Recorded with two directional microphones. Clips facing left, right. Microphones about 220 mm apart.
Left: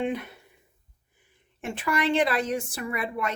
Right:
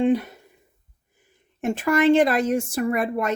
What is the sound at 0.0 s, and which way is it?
Speech, 35° right (ahead or behind).